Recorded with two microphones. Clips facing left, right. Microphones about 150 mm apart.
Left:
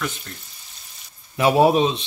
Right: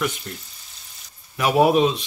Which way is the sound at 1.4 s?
30° left (ahead or behind).